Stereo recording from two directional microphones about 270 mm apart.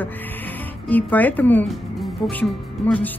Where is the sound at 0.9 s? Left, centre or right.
Centre.